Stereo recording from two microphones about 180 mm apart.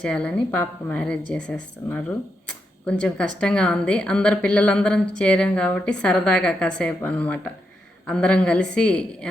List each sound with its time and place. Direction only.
0.0 s a woman's voice: 5° left (ahead or behind)